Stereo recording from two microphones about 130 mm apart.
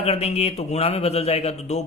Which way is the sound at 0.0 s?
55° left (ahead or behind).